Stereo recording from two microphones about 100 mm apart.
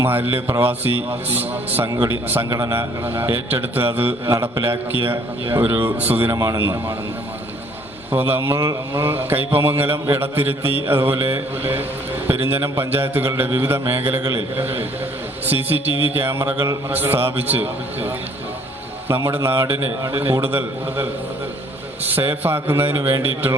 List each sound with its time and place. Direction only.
0.0 s a man's voice: 20° right (ahead or behind)
6.3 s a man's voice: 35° right (ahead or behind)
6.6 s a man's voice: 25° right (ahead or behind)
8.1 s a man's voice: 20° right (ahead or behind)